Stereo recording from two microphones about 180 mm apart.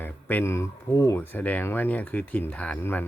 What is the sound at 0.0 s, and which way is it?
Speech, 10° left (ahead or behind).